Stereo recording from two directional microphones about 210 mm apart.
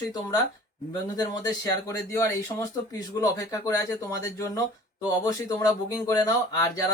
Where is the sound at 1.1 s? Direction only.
20° left (ahead or behind).